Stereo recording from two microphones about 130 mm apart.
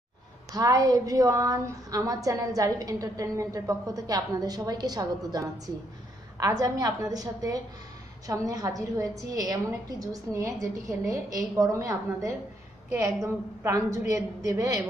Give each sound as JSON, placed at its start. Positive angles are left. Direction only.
{"t": 0.5, "sound": "a woman's voice", "side_deg": -30}